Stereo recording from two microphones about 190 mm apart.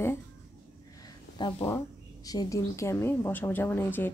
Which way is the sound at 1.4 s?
20° left (ahead or behind).